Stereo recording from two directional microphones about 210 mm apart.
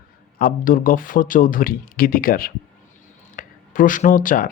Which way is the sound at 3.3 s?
40° left (ahead or behind).